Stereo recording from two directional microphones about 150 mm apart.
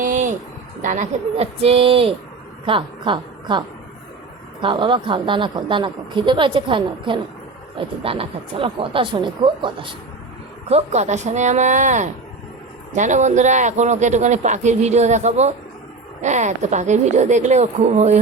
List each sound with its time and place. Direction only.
0.0 s a sound: 55° right (ahead or behind)
0.8 s a woman's voice: 60° right (ahead or behind)
1.4 s a woman's voice: 40° right (ahead or behind)
4.6 s a woman's voice: 35° right (ahead or behind)
10.7 s a man's voice: 45° right (ahead or behind)